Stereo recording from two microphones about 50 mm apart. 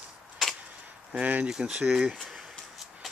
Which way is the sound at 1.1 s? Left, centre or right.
Right.